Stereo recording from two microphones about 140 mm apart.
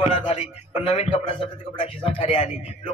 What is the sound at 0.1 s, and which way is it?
Speech, 45° left (ahead or behind).